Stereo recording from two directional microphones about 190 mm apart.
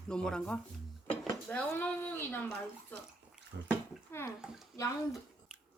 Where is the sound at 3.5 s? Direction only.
70° right (ahead or behind).